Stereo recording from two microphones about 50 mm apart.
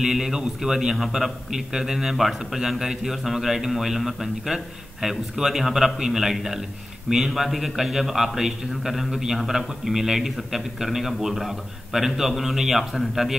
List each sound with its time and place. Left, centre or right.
0.0 s a man's voice: centre